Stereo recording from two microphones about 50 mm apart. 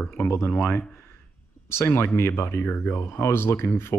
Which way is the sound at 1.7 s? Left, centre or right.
Left.